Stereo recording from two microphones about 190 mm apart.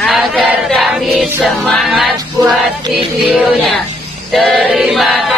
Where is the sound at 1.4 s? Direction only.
Centre (ahead or behind).